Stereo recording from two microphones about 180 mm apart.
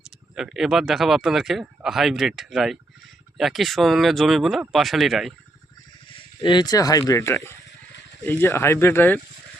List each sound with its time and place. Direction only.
0.3 s a man's voice: centre (ahead or behind)
6.1 s speech: 25° left (ahead or behind)